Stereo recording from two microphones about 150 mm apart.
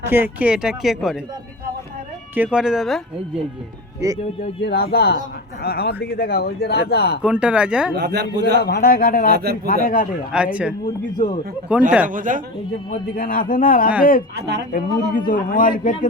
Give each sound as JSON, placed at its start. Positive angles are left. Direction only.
{"t": 0.1, "sound": "speech", "side_deg": -10}
{"t": 2.3, "sound": "speech", "side_deg": -10}
{"t": 4.7, "sound": "speech", "side_deg": 90}
{"t": 7.2, "sound": "speech", "side_deg": -5}
{"t": 8.0, "sound": "a man's voice", "side_deg": -90}
{"t": 8.6, "sound": "speech", "side_deg": 90}
{"t": 9.3, "sound": "a man's voice", "side_deg": -90}
{"t": 9.6, "sound": "a man's voice", "side_deg": 70}
{"t": 10.3, "sound": "speech", "side_deg": -10}
{"t": 11.1, "sound": "a man's voice", "side_deg": 30}
{"t": 11.7, "sound": "speech", "side_deg": -10}
{"t": 12.0, "sound": "a man's voice", "side_deg": -60}
{"t": 13.1, "sound": "a man's voice", "side_deg": 70}